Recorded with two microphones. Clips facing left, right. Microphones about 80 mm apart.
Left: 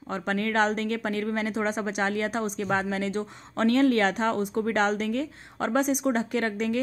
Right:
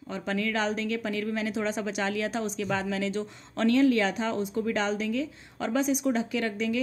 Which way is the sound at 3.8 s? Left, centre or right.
Left.